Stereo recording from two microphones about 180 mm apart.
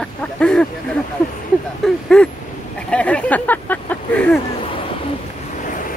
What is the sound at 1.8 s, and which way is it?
Speech, centre (ahead or behind).